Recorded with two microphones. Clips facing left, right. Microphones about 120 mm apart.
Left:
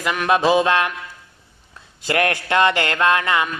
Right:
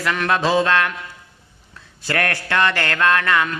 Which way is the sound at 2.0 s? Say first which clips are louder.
Left 3 dB; 20° left (ahead or behind).